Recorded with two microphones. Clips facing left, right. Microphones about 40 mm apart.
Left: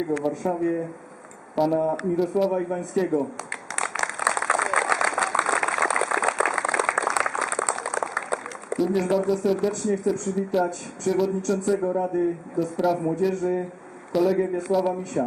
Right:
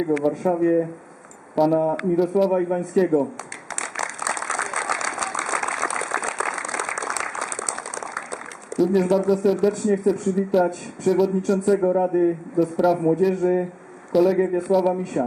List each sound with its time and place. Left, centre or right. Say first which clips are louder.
0.4 s a man's voice: right 7 dB; centre
4.4 s a sound: left 3 dB; centre
7.5 s a sound: left 4 dB; centre
8.8 s speech: right 4 dB; centre
11.8 s a man's voice: right 5 dB; centre
12.5 s a man's voice: right 4 dB; centre
14.7 s speech: right 3 dB; centre